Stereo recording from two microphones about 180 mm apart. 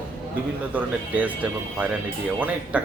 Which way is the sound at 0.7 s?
10° right (ahead or behind).